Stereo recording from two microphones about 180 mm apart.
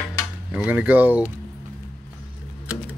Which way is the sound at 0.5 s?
10° right (ahead or behind).